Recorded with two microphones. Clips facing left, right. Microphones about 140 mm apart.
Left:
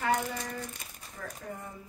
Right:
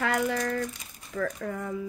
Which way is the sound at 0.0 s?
90° right.